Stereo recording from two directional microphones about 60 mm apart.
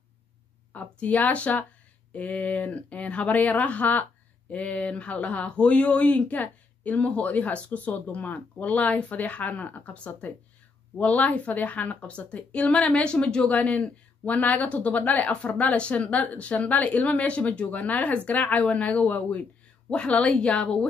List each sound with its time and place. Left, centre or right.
0.7 s a woman's voice: left